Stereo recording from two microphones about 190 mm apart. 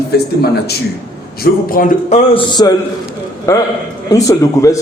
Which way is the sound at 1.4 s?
50° left (ahead or behind).